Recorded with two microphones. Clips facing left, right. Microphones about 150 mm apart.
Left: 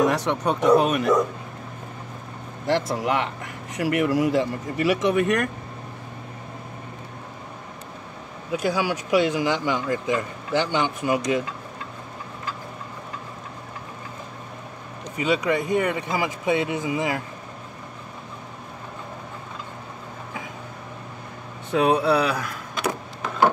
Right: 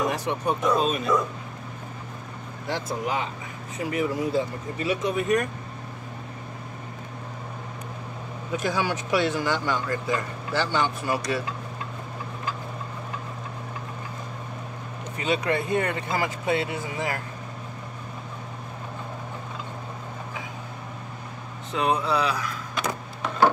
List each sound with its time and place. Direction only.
0.0 s speech: 85° left; by 1.1 s 70° left (ahead or behind)
2.6 s speech: 90° left; by 5.5 s 70° left (ahead or behind)
8.5 s speech: 10° left (ahead or behind)
15.1 s speech: 15° left (ahead or behind)
21.7 s speech: 60° left (ahead or behind)